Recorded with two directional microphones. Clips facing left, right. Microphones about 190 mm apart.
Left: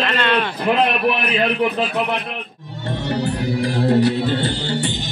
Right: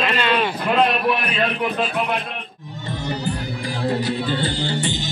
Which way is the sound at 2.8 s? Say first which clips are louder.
Left 4 dB; 65° left (ahead or behind).